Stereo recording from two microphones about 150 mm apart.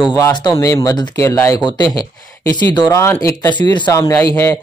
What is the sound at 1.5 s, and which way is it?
Speech, 30° left (ahead or behind).